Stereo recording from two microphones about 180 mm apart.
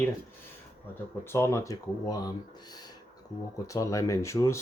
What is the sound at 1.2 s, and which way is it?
Speech, 15° left (ahead or behind).